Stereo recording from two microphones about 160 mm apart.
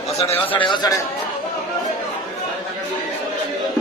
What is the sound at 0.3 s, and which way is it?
Speech, 35° left (ahead or behind).